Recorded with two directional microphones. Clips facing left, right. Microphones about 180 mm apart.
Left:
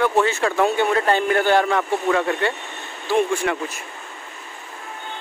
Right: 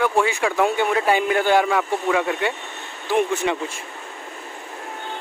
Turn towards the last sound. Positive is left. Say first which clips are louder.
# left 1 dB
turn(degrees=-20)  # may be behind; listen again after turning